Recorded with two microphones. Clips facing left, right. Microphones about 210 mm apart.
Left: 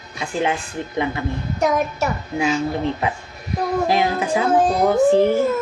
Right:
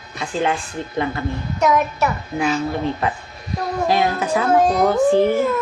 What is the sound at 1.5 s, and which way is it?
Child singing, 50° left (ahead or behind).